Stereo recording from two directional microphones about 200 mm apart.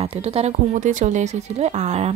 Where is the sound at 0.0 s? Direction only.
30° right (ahead or behind).